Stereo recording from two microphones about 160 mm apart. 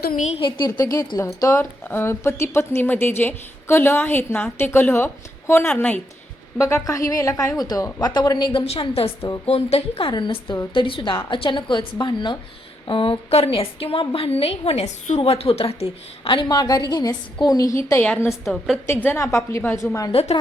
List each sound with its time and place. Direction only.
0.0 s a woman's voice: 65° left (ahead or behind)
0.3 s a woman's voice: 35° left (ahead or behind)
8.5 s a woman's voice: 35° left (ahead or behind); by 18.3 s 15° left (ahead or behind)
18.3 s a woman's voice: centre (ahead or behind)
18.9 s a woman's voice: 15° left (ahead or behind)
20.1 s a woman's voice: 35° left (ahead or behind)